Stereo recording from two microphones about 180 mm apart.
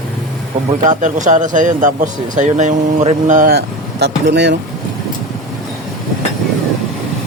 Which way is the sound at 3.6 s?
65° right (ahead or behind).